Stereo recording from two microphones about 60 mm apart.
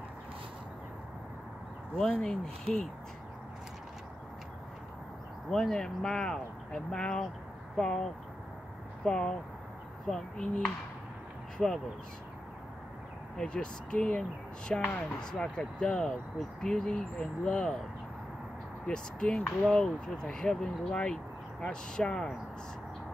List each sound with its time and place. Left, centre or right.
2.0 s speech: centre
5.5 s speech: centre
13.4 s speech: centre
18.9 s speech: centre